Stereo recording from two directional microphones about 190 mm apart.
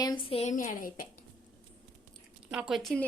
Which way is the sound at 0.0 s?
25° left (ahead or behind).